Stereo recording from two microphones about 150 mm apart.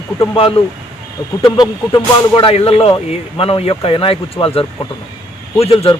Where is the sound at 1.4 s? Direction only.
25° left (ahead or behind).